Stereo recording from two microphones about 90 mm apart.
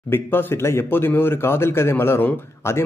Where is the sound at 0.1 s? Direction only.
25° left (ahead or behind).